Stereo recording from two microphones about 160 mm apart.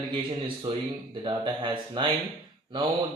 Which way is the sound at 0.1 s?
35° right (ahead or behind).